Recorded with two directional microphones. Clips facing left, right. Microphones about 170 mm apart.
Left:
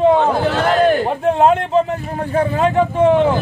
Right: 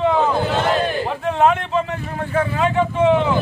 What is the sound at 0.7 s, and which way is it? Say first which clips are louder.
Battle cry: left 7 dB; 45° left (ahead or behind).